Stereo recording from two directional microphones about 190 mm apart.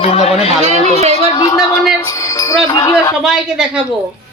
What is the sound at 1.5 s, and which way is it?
Speech, centre (ahead or behind).